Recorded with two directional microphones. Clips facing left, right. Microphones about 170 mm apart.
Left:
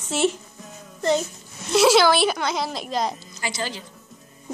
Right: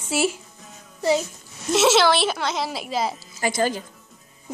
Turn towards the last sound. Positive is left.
turn(degrees=-50)  # may be behind; listen again after turning